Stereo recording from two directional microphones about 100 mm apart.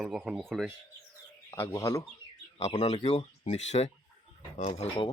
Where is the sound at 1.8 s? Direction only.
35° left (ahead or behind).